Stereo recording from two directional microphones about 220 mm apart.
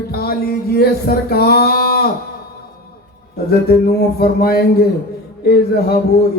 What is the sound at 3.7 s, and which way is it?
A man's voice, 45° left (ahead or behind).